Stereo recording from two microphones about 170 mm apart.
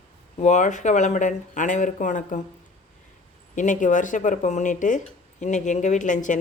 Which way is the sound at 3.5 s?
50° left (ahead or behind).